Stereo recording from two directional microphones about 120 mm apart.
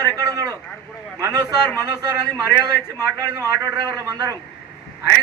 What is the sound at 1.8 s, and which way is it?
A man's voice, 25° right (ahead or behind).